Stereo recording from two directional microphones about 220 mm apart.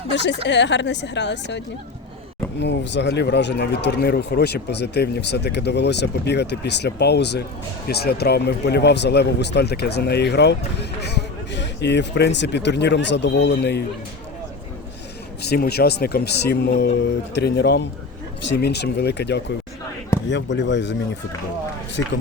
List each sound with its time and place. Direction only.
0.1 s speech: 55° left (ahead or behind)
15.4 s speech: 45° left (ahead or behind)